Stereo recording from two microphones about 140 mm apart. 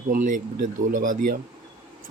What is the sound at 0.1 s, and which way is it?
Speech, 70° right (ahead or behind).